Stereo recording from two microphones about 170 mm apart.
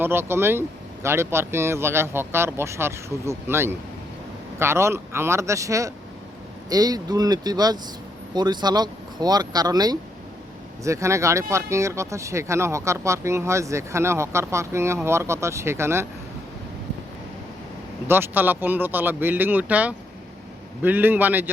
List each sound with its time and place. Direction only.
0.0 s speech: 15° right (ahead or behind)
18.1 s speech: 10° right (ahead or behind)